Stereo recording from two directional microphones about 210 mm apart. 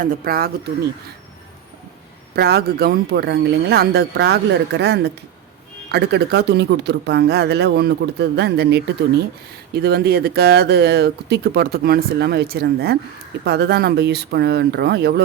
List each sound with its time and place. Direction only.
0.0 s speech: 45° right (ahead or behind)
2.3 s speech: 50° right (ahead or behind)